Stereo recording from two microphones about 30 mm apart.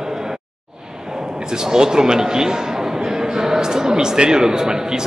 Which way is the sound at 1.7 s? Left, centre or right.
Right.